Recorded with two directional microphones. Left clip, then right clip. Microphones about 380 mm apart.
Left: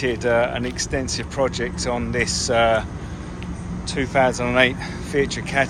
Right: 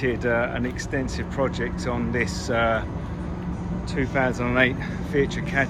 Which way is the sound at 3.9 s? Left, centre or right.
Centre.